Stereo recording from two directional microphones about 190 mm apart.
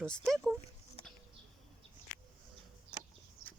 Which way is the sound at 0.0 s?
5° left (ahead or behind).